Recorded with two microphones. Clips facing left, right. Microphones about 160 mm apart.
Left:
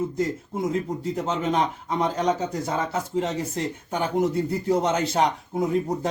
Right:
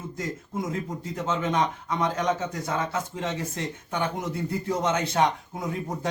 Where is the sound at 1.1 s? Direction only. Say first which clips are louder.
Left 1 dB; 35° left (ahead or behind).